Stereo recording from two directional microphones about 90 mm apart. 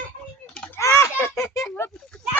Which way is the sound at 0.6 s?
30° left (ahead or behind).